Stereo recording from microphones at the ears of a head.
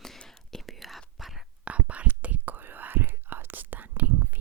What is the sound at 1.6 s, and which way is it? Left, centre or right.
Whispering, right.